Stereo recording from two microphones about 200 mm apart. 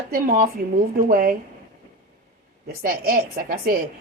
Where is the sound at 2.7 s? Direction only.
50° right (ahead or behind).